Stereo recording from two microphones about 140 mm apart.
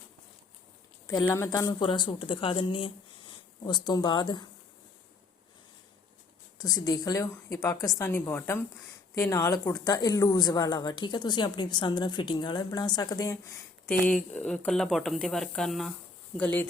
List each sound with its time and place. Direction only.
1.2 s speech: 20° left (ahead or behind)
6.6 s speech: 30° left (ahead or behind)
14.3 s speech: 5° left (ahead or behind)
16.4 s speech: 15° left (ahead or behind)